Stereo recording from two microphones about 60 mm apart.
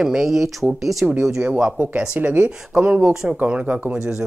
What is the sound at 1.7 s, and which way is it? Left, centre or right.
Speech, right.